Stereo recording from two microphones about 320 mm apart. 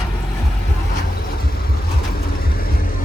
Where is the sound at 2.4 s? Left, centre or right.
Left.